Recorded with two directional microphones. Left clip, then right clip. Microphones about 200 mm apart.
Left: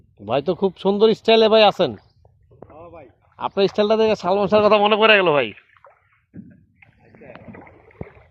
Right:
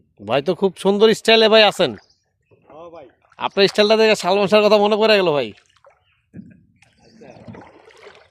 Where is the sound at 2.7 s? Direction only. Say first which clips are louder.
Right 4 dB; 30° right (ahead or behind).